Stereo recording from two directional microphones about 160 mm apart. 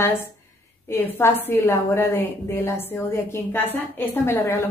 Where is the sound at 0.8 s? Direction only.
15° left (ahead or behind).